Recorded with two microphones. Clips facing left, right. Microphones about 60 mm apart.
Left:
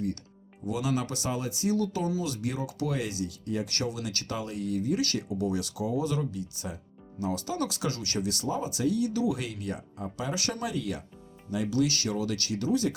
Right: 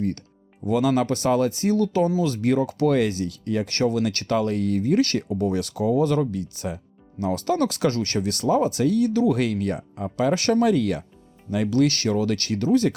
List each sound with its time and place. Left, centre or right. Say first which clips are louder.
0.7 s speech: right 9 dB; right